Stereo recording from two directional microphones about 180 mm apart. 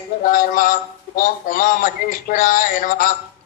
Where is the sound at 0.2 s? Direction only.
45° left (ahead or behind).